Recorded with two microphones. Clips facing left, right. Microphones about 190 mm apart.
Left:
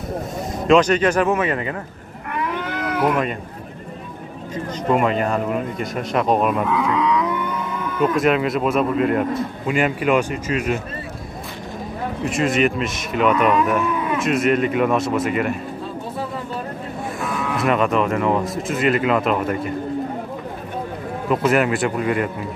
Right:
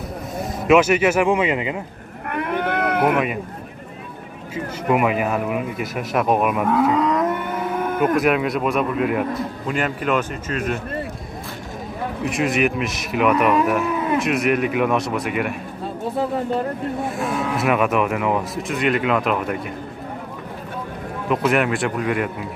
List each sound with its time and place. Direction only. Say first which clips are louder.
0.7 s speech: even; 5° right (ahead or behind)
2.3 s cat: right 3 dB; 55° right (ahead or behind)
4.8 s speech: even; 10° right (ahead or behind)
6.6 s livestock: right 2 dB; 45° right (ahead or behind)
8.2 s speech: left 1 dB; centre (ahead or behind)
9.7 s speech: left 4 dB; 10° left (ahead or behind)
12.3 s speech: left 1 dB; centre (ahead or behind)
17.6 s speech: left 1 dB; 5° right (ahead or behind)
21.3 s speech: left 1 dB; centre (ahead or behind)